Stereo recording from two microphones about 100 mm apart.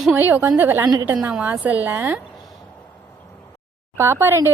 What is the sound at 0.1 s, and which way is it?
A woman's voice, 20° right (ahead or behind).